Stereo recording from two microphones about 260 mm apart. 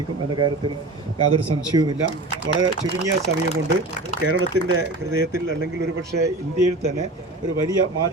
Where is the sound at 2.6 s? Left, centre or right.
Right.